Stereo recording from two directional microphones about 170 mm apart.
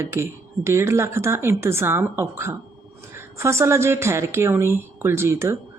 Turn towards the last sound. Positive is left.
turn(degrees=-15)  # may be behind; listen again after turning